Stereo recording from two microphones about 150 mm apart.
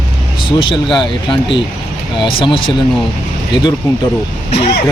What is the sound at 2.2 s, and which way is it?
Speech, 35° left (ahead or behind).